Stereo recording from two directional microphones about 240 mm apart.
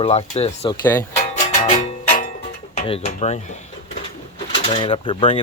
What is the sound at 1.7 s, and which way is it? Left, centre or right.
Music, left.